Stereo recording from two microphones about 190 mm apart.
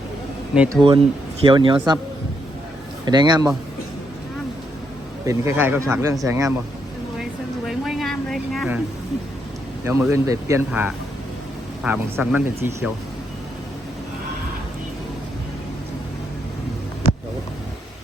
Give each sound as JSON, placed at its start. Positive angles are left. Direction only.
{"t": 0.7, "sound": "speech", "side_deg": -25}
{"t": 3.1, "sound": "speech", "side_deg": -20}
{"t": 5.2, "sound": "speech", "side_deg": -15}
{"t": 7.2, "sound": "a sound", "side_deg": 0}
{"t": 9.8, "sound": "speech", "side_deg": -15}